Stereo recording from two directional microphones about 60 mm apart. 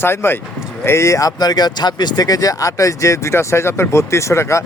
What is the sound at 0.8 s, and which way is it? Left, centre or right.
Speech, left.